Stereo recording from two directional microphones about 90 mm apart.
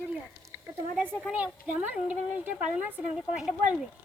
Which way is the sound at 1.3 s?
15° right (ahead or behind).